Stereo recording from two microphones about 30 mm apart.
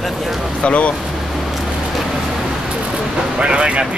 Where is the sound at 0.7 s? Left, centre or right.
Left.